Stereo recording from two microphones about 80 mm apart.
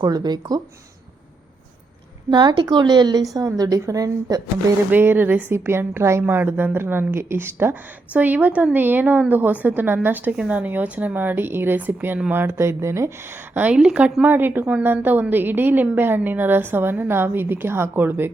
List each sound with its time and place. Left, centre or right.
0.0 s speech: right
2.3 s speech: right
3.3 s speech: right
4.9 s a woman's voice: right
13.5 s a woman's voice: right
14.2 s a woman's voice: right